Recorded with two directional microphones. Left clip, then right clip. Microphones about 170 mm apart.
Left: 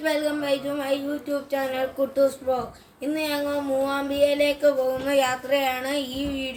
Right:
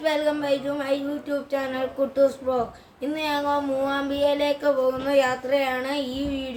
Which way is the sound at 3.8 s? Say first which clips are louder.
Left 2 dB; 20° right (ahead or behind).